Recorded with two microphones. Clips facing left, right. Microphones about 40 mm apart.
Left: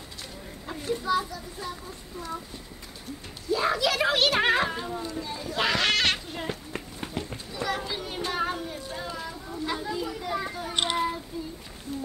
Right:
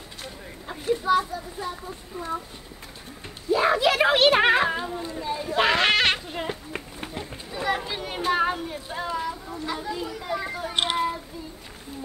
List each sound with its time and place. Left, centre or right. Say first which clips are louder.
0.7 s a woman's voice: right 5 dB; centre
3.4 s a woman's voice: right 5 dB; right